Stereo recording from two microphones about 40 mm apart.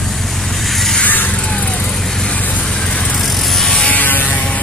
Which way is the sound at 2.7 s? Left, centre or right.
Left.